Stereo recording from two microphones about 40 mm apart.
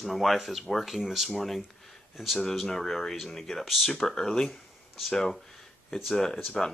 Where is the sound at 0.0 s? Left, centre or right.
Centre.